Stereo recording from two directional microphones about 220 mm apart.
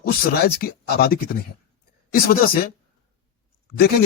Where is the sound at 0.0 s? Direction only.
45° left (ahead or behind).